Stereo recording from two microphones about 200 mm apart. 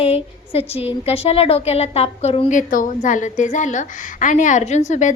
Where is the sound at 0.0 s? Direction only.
30° left (ahead or behind).